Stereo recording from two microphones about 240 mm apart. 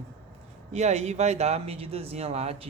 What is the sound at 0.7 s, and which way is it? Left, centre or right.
Speech, right.